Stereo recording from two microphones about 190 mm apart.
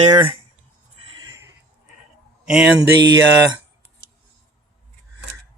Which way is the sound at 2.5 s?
5° right (ahead or behind).